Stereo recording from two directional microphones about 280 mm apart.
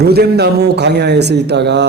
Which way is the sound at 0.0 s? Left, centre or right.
Right.